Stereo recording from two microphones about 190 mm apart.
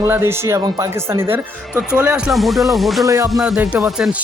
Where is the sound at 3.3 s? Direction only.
Centre (ahead or behind).